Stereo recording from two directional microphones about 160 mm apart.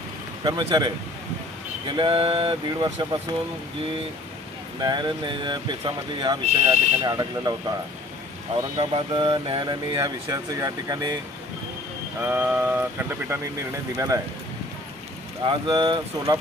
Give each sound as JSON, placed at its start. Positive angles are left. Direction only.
{"t": 0.4, "sound": "speech", "side_deg": -25}
{"t": 4.8, "sound": "speech", "side_deg": -25}
{"t": 8.8, "sound": "speech", "side_deg": -30}
{"t": 12.2, "sound": "speech", "side_deg": -10}
{"t": 15.4, "sound": "speech", "side_deg": -30}